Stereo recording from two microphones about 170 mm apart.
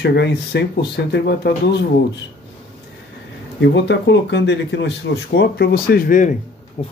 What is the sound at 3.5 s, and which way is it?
Speech, 90° left.